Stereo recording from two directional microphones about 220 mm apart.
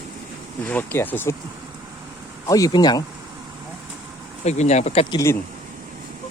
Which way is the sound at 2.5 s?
15° left (ahead or behind).